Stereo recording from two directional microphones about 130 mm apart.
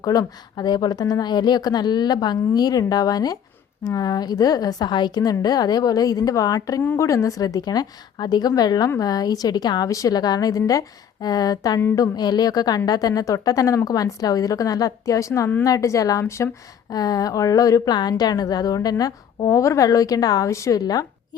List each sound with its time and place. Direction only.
0.0 s a woman's voice: 30° left (ahead or behind)
11.8 s a sound: 20° left (ahead or behind)
12.1 s a woman's voice: 30° left (ahead or behind)